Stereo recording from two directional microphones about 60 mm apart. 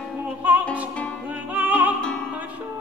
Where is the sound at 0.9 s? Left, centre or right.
Left.